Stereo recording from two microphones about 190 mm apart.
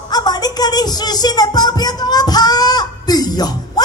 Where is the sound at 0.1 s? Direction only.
20° left (ahead or behind).